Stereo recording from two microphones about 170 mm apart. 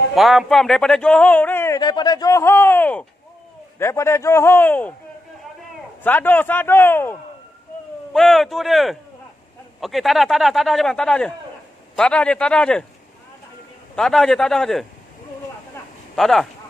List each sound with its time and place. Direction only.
0.1 s a man's voice: centre (ahead or behind)
1.8 s speech: 25° left (ahead or behind); by 4.9 s 10° left (ahead or behind)
6.0 s speech: 10° left (ahead or behind)
8.1 s a man's voice: centre (ahead or behind)
13.9 s a man's voice: 5° left (ahead or behind)
16.2 s a man's voice: centre (ahead or behind)